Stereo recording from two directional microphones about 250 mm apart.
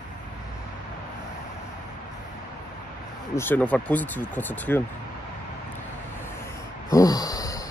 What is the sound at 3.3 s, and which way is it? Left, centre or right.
Speech, centre.